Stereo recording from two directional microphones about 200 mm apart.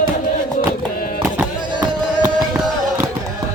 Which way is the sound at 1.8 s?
20° right (ahead or behind).